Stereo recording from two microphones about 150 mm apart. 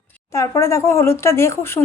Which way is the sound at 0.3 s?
20° left (ahead or behind).